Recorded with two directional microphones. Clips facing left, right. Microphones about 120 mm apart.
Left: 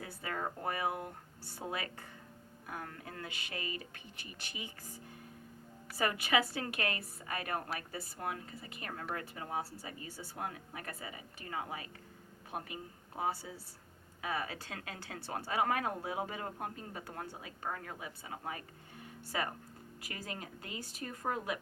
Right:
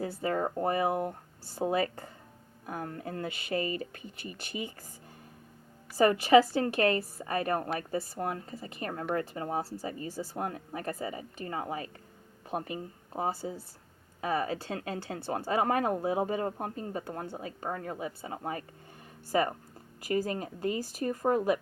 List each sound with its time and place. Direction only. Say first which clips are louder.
0.0 s speech: right 9 dB; 30° right (ahead or behind)
6.0 s speech: right 11 dB; 35° right (ahead or behind)